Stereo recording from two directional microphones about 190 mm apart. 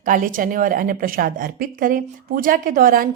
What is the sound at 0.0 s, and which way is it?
A woman's voice, 45° right (ahead or behind).